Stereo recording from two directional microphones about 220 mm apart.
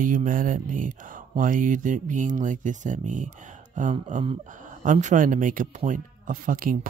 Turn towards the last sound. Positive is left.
turn(degrees=-40)  # may be behind; listen again after turning